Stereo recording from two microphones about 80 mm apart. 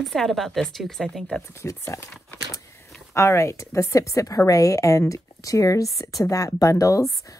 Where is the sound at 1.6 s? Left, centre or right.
Left.